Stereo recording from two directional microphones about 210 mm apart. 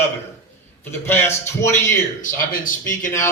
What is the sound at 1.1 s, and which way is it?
Speech, 10° left (ahead or behind).